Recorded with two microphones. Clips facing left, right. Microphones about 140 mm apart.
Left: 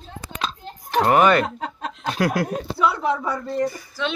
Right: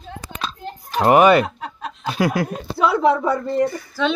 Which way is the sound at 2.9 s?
90° right.